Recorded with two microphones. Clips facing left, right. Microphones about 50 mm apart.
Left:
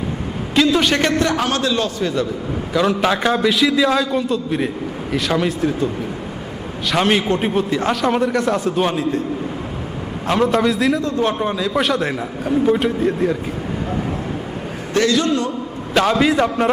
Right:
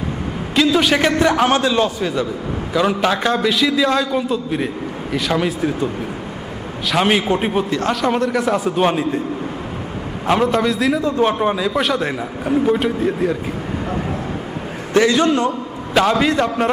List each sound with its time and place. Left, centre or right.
0.5 s a man's voice: centre
6.9 s speech: centre
7.7 s a man's voice: centre
10.2 s a man's voice: centre
11.0 s speech: centre
11.7 s a man's voice: centre
14.9 s a man's voice: right
16.0 s a man's voice: centre